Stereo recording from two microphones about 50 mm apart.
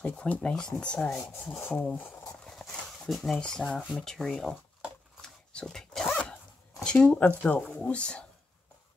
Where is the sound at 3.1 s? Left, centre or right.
Centre.